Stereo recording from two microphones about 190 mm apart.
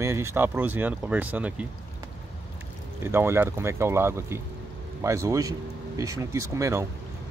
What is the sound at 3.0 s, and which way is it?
Speech, 15° right (ahead or behind).